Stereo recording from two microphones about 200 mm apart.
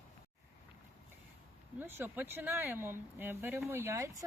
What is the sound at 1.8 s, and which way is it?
Speech, 10° right (ahead or behind).